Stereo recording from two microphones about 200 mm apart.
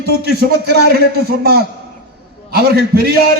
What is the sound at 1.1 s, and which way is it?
A man's voice, 55° right (ahead or behind).